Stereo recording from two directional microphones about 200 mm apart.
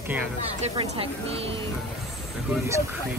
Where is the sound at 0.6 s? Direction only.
30° right (ahead or behind).